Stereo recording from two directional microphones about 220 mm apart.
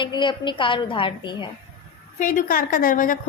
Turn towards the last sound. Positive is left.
turn(degrees=40)  # may be behind; listen again after turning